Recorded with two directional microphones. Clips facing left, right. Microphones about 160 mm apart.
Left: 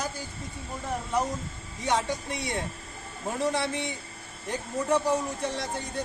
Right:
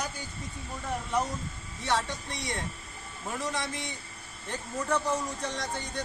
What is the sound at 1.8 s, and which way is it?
Speech, 20° left (ahead or behind).